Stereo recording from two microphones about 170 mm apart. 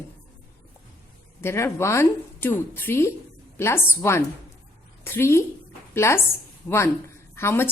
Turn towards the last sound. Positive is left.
turn(degrees=15)  # may be behind; listen again after turning